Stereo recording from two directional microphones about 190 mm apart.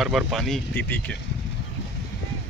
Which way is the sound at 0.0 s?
Centre (ahead or behind).